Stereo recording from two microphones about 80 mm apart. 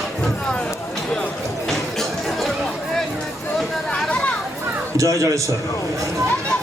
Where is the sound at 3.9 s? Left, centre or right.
Centre.